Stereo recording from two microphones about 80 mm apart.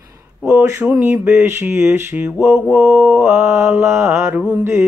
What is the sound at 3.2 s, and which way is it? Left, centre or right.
Mantra, right.